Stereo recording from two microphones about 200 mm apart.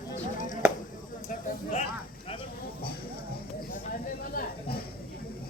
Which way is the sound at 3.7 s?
45° left (ahead or behind).